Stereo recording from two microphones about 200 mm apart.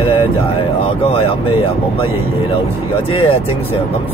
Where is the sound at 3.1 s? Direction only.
30° left (ahead or behind).